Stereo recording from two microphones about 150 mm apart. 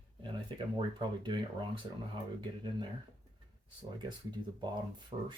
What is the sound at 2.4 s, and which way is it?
Speech, 30° right (ahead or behind).